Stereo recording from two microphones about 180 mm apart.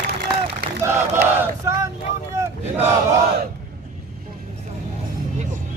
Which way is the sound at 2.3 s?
15° right (ahead or behind).